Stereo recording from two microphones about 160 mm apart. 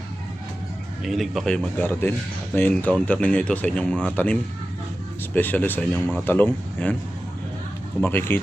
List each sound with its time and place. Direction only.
1.0 s a man's voice: centre (ahead or behind)
8.0 s speech: 15° left (ahead or behind)